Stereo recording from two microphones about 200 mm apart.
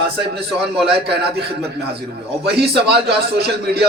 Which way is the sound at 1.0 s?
55° right (ahead or behind).